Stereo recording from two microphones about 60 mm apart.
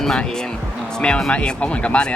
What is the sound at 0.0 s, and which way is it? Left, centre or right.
Speech, centre.